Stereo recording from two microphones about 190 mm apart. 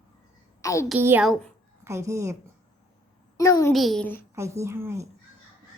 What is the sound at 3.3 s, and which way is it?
Speech, 15° left (ahead or behind).